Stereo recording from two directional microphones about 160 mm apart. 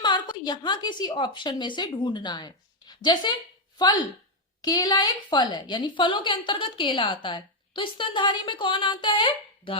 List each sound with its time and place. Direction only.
0.0 s a woman's voice: 30° left (ahead or behind)